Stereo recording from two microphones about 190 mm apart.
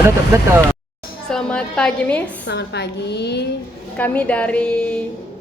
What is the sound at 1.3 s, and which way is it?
A woman's voice, 5° left (ahead or behind).